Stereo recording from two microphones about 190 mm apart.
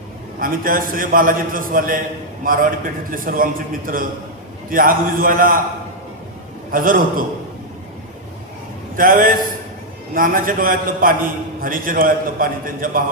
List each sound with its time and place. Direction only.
0.3 s a man's voice: 50° right (ahead or behind)
6.7 s a man's voice: 45° right (ahead or behind)
9.0 s a man's voice: 45° right (ahead or behind)